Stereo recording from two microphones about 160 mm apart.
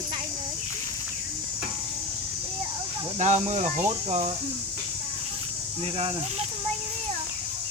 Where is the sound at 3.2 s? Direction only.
45° right (ahead or behind).